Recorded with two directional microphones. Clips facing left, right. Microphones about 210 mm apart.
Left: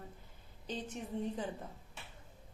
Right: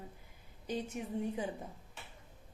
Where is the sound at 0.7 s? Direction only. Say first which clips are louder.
Right 3 dB; 10° right (ahead or behind).